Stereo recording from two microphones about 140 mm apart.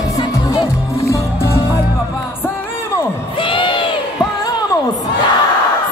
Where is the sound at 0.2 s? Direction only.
30° left (ahead or behind).